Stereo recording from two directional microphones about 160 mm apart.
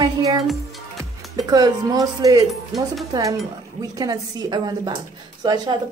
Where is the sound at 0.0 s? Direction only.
25° right (ahead or behind).